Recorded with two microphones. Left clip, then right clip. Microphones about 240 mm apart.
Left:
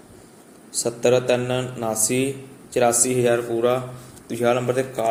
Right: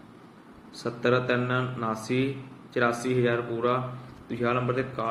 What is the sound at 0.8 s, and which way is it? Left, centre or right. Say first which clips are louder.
Speech: left 6 dB; centre.